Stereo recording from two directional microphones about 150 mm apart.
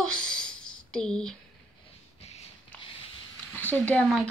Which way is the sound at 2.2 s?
45° left (ahead or behind).